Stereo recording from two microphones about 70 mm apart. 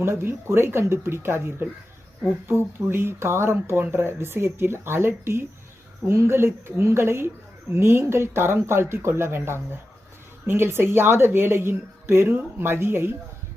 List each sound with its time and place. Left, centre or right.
0.0 s speech: right